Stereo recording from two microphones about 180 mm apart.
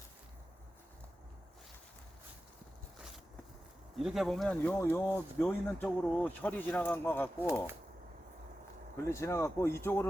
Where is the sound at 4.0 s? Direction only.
Centre (ahead or behind).